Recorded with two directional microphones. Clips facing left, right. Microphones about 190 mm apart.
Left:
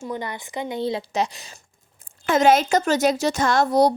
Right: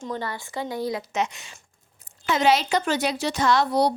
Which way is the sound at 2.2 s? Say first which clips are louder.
Left 4 dB; 50° left (ahead or behind).